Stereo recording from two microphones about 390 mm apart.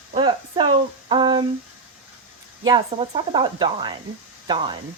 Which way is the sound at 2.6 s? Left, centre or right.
Centre.